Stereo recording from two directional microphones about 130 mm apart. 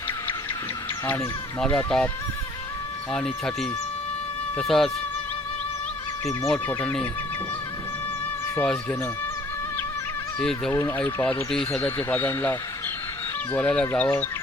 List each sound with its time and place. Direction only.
1.0 s speech: 15° left (ahead or behind)
3.1 s speech: 5° left (ahead or behind)
6.5 s speech: 10° left (ahead or behind)
8.6 s speech: 5° left (ahead or behind)
10.4 s speech: 5° left (ahead or behind)
10.7 s speech: 25° left (ahead or behind)
10.9 s speech: 10° left (ahead or behind)
11.8 s speech: 15° left (ahead or behind)